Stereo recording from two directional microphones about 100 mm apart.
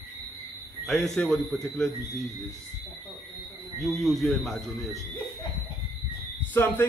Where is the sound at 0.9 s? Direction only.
5° left (ahead or behind).